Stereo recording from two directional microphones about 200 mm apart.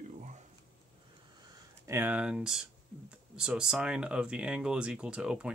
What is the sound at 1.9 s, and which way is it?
Speech, 10° right (ahead or behind).